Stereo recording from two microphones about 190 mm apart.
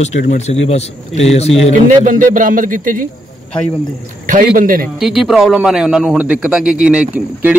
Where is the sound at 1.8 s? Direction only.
45° right (ahead or behind).